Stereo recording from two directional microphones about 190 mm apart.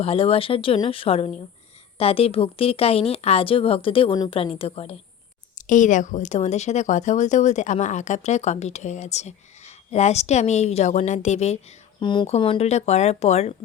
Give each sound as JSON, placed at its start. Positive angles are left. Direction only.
{"t": 0.0, "sound": "speech", "side_deg": 30}
{"t": 5.5, "sound": "speech", "side_deg": 40}
{"t": 11.9, "sound": "speech", "side_deg": 25}